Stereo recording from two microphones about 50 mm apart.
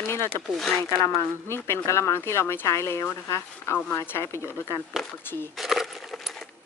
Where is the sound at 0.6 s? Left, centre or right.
Centre.